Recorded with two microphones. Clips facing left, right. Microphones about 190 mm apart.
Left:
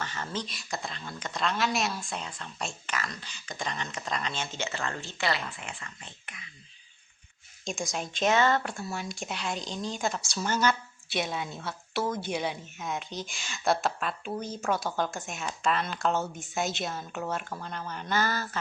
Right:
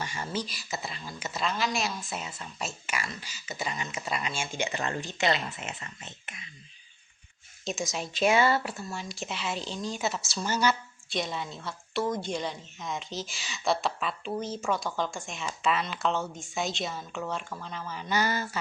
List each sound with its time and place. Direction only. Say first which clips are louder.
0.0 s speech: right 1 dB; 10° right (ahead or behind)
7.6 s speech: right 1 dB; centre (ahead or behind)
11.2 s speech: left 1 dB; 5° left (ahead or behind)
18.1 s speech: right 1 dB; 15° right (ahead or behind)